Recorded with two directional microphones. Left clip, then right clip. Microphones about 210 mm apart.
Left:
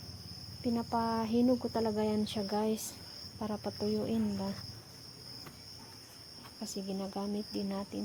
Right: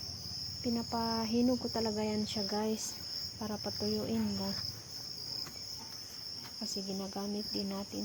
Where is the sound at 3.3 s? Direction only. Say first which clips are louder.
Left 5 dB; 5° left (ahead or behind).